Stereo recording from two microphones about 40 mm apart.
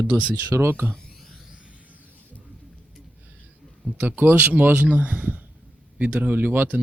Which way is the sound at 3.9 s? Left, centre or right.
Right.